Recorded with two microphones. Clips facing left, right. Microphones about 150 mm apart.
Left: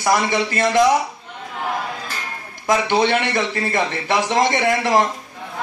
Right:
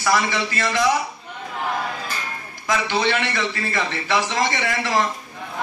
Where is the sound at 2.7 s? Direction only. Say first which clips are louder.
Left 4 dB; 50° left (ahead or behind).